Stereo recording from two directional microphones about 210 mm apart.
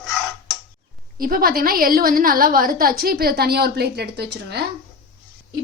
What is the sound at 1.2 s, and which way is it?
A woman's voice, 45° right (ahead or behind).